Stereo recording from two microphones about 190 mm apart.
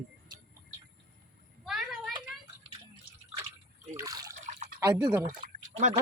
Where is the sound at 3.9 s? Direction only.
20° right (ahead or behind).